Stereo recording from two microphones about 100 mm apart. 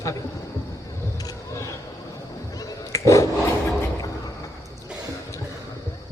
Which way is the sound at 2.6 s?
30° left (ahead or behind).